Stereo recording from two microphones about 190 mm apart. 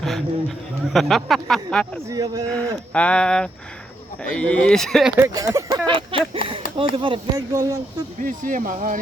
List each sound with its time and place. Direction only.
0.0 s speech: centre (ahead or behind)
2.0 s speech: 20° right (ahead or behind)
2.9 s speech: 5° left (ahead or behind)
5.1 s speech: 15° right (ahead or behind)
8.2 s speech: 45° right (ahead or behind)